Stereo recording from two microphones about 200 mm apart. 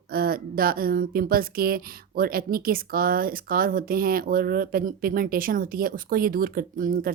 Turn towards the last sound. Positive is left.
turn(degrees=-45)  # may be behind; listen again after turning